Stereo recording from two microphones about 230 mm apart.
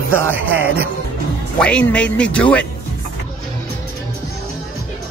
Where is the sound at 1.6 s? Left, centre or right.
Centre.